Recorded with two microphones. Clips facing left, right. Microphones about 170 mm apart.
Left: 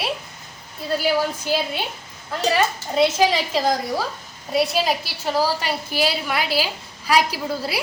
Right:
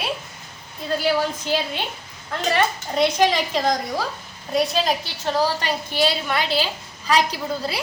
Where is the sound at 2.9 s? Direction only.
5° left (ahead or behind).